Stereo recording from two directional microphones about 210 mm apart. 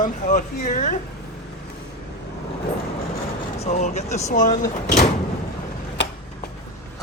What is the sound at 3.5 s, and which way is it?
Speech, 35° left (ahead or behind).